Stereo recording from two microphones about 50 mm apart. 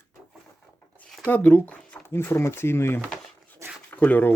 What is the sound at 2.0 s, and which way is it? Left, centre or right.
Speech, left.